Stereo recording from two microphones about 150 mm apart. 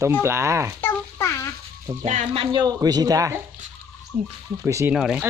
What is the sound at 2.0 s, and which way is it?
Speech, 55° right (ahead or behind).